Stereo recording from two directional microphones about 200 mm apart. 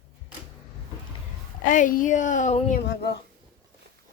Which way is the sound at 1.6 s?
40° left (ahead or behind).